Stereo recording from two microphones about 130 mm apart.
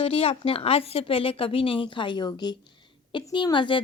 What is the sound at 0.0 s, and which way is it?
Speech, 45° left (ahead or behind).